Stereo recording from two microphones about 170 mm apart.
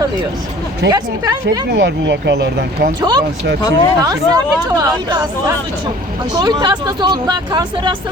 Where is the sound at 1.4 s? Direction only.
90° right.